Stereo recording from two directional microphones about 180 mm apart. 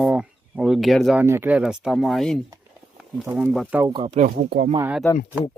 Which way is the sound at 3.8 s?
25° right (ahead or behind).